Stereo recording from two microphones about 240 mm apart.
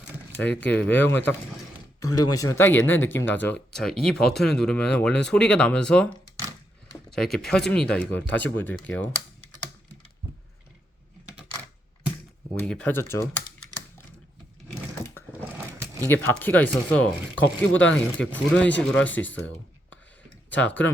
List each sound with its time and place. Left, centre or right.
0.8 s speech: centre
12.5 s speech: centre
15.5 s a sound: centre
16.0 s speech: centre
17.3 s speech: left
18.3 s speech: centre
20.6 s speech: centre